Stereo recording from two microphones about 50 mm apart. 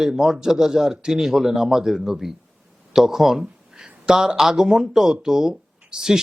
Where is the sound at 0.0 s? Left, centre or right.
Centre.